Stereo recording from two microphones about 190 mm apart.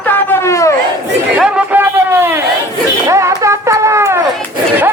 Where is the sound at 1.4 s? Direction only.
10° right (ahead or behind).